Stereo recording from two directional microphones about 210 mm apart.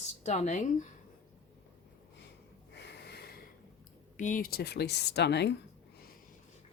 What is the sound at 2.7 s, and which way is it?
Snort, 55° left (ahead or behind).